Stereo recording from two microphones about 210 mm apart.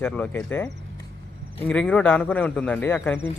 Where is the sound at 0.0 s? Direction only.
5° left (ahead or behind).